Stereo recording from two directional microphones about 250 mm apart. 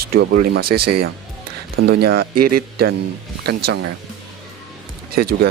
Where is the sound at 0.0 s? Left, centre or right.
Right.